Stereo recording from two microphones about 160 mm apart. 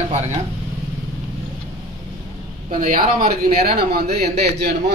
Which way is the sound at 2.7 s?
60° right (ahead or behind).